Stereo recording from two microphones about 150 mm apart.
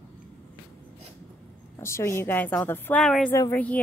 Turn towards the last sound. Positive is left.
turn(degrees=10)  # may be behind; listen again after turning